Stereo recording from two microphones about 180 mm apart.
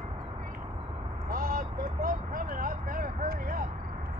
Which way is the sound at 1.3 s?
55° right (ahead or behind).